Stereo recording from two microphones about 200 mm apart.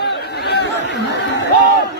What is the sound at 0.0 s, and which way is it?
Chatter, 55° left (ahead or behind).